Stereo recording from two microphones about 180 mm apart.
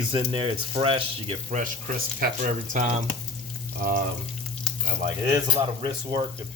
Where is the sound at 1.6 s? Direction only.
50° right (ahead or behind).